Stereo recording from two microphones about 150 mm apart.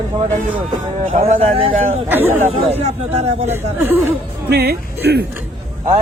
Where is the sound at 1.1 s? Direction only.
40° right (ahead or behind).